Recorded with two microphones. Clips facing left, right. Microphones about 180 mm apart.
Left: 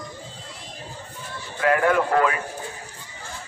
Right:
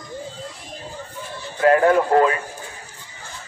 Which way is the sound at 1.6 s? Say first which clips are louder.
Right 5 dB; 30° right (ahead or behind).